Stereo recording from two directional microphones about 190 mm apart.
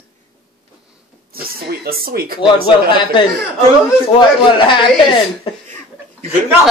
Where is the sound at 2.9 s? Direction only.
25° left (ahead or behind).